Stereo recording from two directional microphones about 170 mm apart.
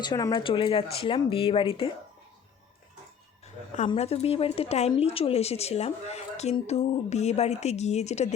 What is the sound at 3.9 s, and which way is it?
Speech, 35° left (ahead or behind).